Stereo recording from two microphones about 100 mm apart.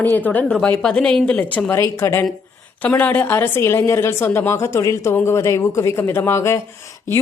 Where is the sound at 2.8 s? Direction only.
15° left (ahead or behind).